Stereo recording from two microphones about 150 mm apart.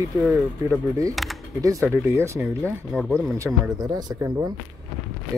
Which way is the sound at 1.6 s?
20° right (ahead or behind).